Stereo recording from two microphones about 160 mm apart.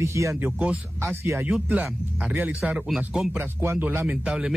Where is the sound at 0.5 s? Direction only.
5° right (ahead or behind).